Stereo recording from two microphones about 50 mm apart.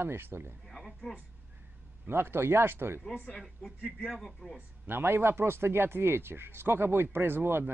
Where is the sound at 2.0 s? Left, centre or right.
Right.